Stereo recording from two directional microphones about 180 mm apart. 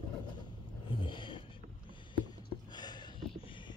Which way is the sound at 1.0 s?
25° left (ahead or behind).